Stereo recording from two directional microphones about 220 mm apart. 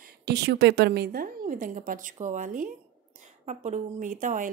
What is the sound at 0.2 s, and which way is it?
Speech, 50° right (ahead or behind).